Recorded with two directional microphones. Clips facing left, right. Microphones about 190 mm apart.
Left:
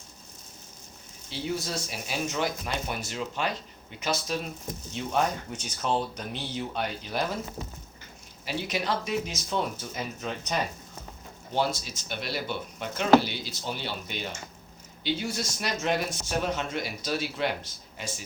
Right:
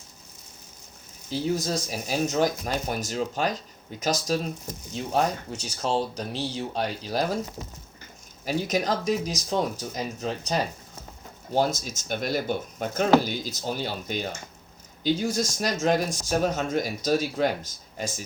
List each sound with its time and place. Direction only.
1.3 s speech: 40° right (ahead or behind)
8.4 s speech: 45° right (ahead or behind)
11.5 s speech: 45° right (ahead or behind)